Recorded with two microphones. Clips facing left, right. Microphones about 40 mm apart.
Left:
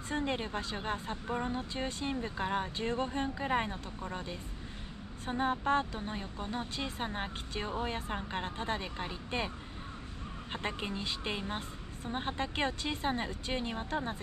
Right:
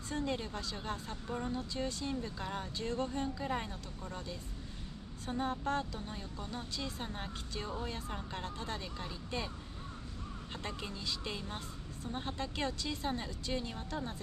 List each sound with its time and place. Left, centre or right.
0.1 s speech: left
10.5 s speech: left